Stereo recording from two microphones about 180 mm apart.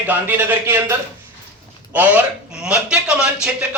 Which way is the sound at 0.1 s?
10° right (ahead or behind).